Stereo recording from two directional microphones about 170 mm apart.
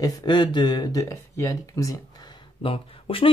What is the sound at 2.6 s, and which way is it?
Speech, 30° left (ahead or behind).